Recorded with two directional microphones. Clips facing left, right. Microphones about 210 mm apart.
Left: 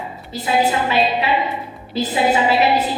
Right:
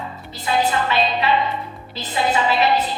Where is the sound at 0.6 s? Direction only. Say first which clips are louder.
Left 2 dB; 10° left (ahead or behind).